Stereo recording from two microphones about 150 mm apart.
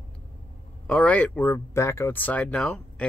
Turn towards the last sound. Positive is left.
turn(degrees=5)  # may be behind; listen again after turning